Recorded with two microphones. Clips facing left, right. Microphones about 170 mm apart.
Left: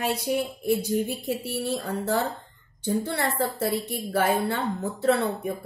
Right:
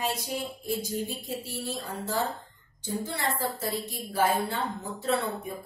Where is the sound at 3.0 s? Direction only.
65° left (ahead or behind).